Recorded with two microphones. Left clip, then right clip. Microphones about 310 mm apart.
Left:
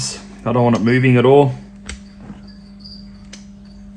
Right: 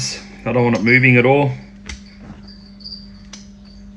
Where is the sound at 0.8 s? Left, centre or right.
Left.